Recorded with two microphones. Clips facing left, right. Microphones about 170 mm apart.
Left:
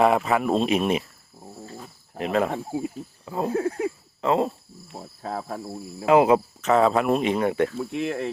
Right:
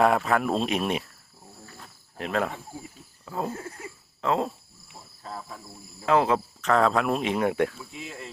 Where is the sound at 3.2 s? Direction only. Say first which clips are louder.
Left 3 dB; 10° left (ahead or behind).